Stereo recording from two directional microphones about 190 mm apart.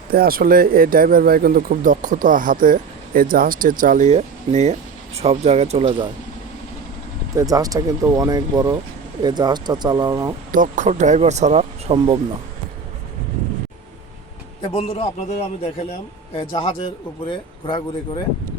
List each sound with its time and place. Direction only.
0.1 s speech: 50° right (ahead or behind); by 6.1 s 30° right (ahead or behind)
7.3 s speech: 20° right (ahead or behind)
10.5 s speech: 45° right (ahead or behind)
14.6 s speech: 30° left (ahead or behind)
16.3 s speech: 30° left (ahead or behind)